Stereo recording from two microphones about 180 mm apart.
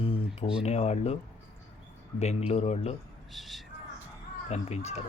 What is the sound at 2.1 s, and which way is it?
Speech, 35° left (ahead or behind).